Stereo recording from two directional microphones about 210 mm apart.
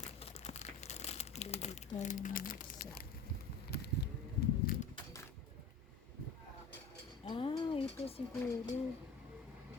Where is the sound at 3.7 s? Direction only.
50° left (ahead or behind).